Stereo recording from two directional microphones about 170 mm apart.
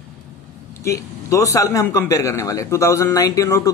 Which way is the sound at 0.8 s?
15° left (ahead or behind).